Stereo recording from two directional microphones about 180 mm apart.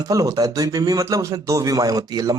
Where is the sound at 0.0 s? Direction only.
20° right (ahead or behind).